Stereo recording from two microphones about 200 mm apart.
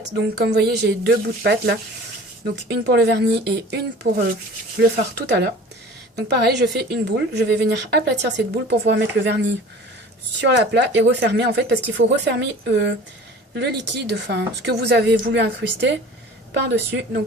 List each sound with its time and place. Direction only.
0.3 s a woman's voice: 55° right (ahead or behind)
10.4 s a woman's voice: 60° right (ahead or behind)
16.6 s a woman's voice: 55° right (ahead or behind)